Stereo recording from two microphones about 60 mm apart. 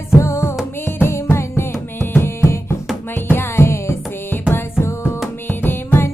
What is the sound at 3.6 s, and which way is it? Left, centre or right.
Music, left.